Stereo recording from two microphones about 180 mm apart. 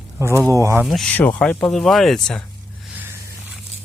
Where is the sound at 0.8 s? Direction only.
Centre (ahead or behind).